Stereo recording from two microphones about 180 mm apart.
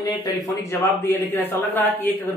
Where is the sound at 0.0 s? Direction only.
25° left (ahead or behind).